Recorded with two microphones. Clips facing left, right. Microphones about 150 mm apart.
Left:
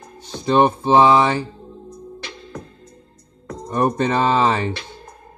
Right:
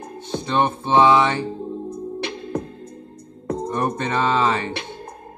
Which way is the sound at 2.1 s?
60° right (ahead or behind).